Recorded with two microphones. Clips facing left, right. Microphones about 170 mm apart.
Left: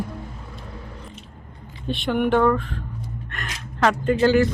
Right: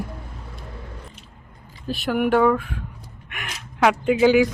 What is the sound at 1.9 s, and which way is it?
Speech, 5° right (ahead or behind).